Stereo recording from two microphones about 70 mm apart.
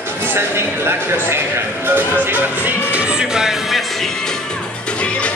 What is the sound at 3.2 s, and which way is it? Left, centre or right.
Speech, centre.